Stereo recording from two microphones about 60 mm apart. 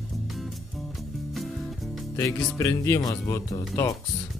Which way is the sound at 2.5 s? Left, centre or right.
Left.